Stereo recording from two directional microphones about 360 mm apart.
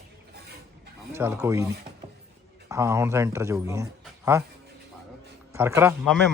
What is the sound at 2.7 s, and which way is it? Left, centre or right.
Speech, centre.